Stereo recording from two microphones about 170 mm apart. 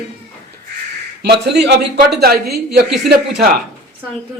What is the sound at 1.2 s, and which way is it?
Speech, 80° right.